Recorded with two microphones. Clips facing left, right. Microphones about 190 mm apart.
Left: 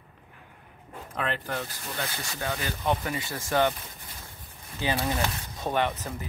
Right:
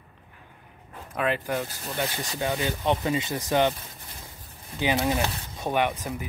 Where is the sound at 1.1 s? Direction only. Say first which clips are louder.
Right 5 dB; 10° right (ahead or behind).